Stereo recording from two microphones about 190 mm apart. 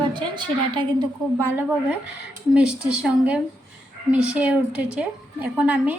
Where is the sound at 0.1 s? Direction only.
25° right (ahead or behind).